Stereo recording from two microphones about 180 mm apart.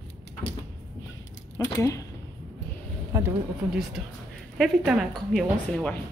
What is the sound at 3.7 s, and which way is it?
A woman's voice, 5° right (ahead or behind).